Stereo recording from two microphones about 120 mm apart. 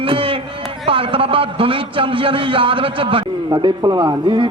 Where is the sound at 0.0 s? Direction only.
50° right (ahead or behind).